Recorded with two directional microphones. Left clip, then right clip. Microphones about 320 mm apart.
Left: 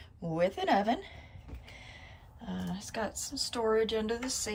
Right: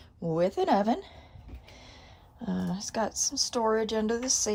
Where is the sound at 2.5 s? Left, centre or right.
Centre.